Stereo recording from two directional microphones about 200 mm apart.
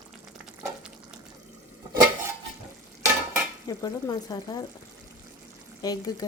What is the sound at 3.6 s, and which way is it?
Speech, 20° left (ahead or behind).